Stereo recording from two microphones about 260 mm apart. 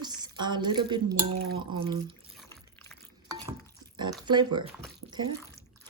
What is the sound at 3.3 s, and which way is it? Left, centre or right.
Stir, centre.